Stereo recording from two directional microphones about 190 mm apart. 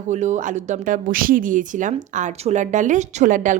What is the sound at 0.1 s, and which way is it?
A woman's voice, 40° right (ahead or behind).